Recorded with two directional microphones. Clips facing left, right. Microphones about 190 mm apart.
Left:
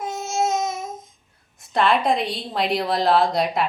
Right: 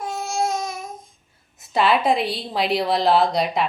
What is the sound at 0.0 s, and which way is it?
Babbling, 20° left (ahead or behind).